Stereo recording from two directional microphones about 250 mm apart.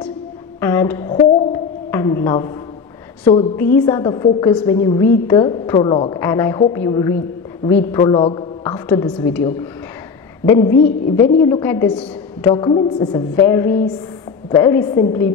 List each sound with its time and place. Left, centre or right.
0.6 s a sound: centre
3.5 s a woman's voice: centre
8.6 s a woman's voice: centre
12.4 s a woman's voice: centre